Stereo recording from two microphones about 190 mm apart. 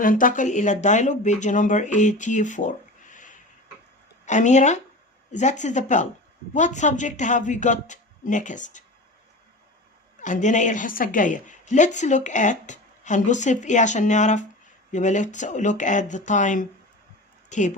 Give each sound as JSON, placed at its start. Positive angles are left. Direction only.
{"t": 0.0, "sound": "a woman's voice", "side_deg": 45}
{"t": 10.2, "sound": "a woman's voice", "side_deg": 40}